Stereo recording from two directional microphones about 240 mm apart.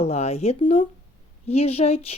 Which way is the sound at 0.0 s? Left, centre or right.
Left.